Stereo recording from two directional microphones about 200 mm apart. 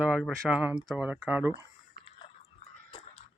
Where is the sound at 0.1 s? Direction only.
Centre (ahead or behind).